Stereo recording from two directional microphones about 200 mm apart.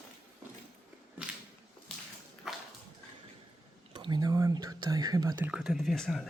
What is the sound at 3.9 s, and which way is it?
Whispering, 20° right (ahead or behind).